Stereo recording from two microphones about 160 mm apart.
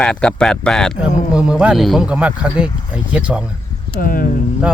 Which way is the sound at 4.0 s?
60° left (ahead or behind).